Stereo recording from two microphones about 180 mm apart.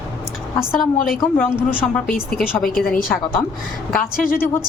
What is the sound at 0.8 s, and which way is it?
Speech, 50° left (ahead or behind).